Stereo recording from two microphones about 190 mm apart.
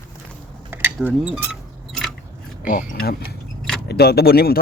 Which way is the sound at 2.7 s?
45° left (ahead or behind).